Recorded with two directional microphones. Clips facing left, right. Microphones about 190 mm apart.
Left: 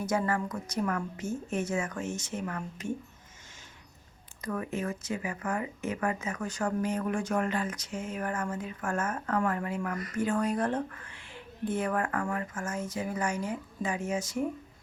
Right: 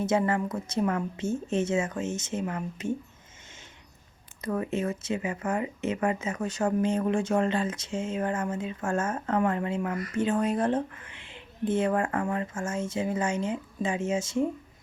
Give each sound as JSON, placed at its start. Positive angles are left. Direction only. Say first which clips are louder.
{"t": 0.0, "sound": "speech", "louder": "right 4 dB", "side_deg": -25}
{"t": 4.4, "sound": "speech", "louder": "right 4 dB", "side_deg": -25}